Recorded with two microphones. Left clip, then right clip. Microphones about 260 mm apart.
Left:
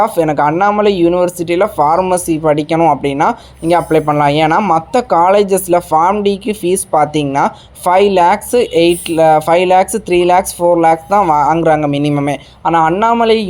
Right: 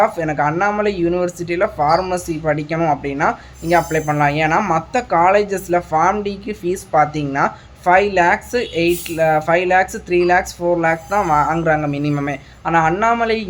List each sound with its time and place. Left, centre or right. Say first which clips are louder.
0.0 s speech: left 5 dB; left